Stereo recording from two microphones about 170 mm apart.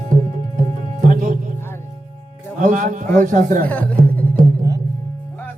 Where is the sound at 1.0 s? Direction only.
50° right (ahead or behind).